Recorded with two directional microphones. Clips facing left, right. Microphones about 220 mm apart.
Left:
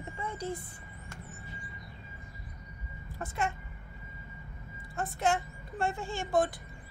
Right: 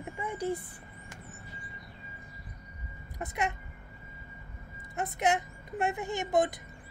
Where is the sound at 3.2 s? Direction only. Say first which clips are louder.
Right 1 dB; 20° right (ahead or behind).